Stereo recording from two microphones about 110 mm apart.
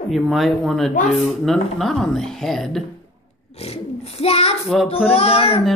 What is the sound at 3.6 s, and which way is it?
A child's voice, 65° left (ahead or behind).